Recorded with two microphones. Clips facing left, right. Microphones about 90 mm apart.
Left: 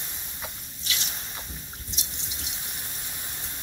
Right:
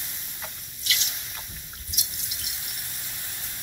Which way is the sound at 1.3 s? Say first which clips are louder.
Left 2 dB; 30° left (ahead or behind).